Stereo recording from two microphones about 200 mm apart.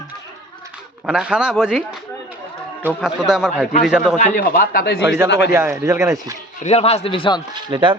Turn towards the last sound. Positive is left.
turn(degrees=-25)  # may be behind; listen again after turning